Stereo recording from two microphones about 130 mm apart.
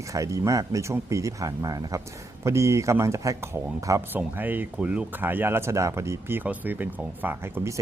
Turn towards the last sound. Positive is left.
turn(degrees=-15)  # may be behind; listen again after turning